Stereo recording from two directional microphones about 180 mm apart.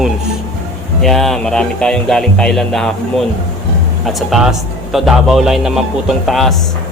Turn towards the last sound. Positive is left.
turn(degrees=0)  # may be behind; listen again after turning